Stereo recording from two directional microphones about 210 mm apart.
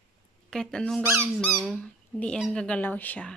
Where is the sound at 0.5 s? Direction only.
5° left (ahead or behind).